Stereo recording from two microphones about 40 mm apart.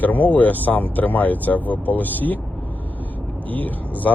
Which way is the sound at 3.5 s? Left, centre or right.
Left.